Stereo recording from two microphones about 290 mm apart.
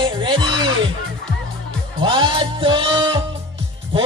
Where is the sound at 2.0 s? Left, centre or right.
Centre.